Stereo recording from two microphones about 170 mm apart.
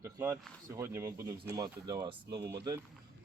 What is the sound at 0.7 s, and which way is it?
Speech, 15° right (ahead or behind).